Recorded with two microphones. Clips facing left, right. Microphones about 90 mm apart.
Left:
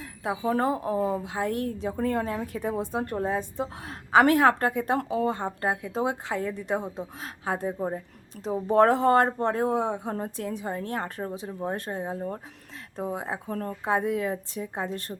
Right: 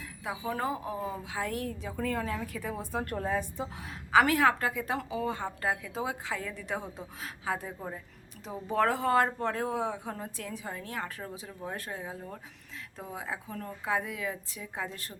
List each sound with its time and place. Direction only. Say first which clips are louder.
0.0 s speech: left 7 dB; 40° left (ahead or behind)
1.3 s a woman's voice: left 6 dB; 35° left (ahead or behind)
3.8 s a woman's voice: left 4 dB; 40° left (ahead or behind)
5.6 s a woman's voice: left 4 dB; 30° left (ahead or behind)
6.0 s a woman's voice: left 6 dB; 40° left (ahead or behind)
7.4 s a woman's voice: left 7 dB; 40° left (ahead or behind)